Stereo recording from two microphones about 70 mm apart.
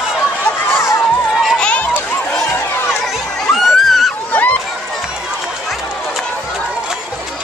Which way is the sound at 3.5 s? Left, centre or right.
Centre.